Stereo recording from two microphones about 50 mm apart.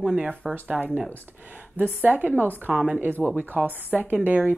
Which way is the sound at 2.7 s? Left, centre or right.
Centre.